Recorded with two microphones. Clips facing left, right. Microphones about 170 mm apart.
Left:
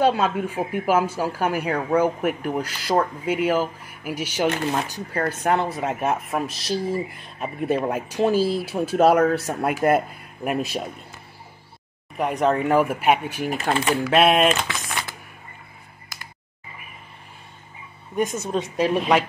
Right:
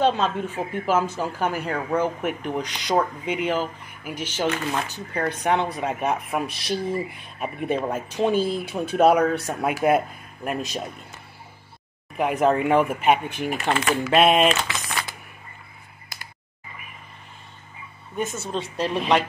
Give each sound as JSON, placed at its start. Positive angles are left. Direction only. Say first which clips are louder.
{"t": 0.0, "sound": "speech", "louder": "left 2 dB", "side_deg": 10}
{"t": 12.2, "sound": "speech", "louder": "right 1 dB", "side_deg": 0}
{"t": 18.1, "sound": "a woman's voice", "louder": "left 4 dB", "side_deg": 10}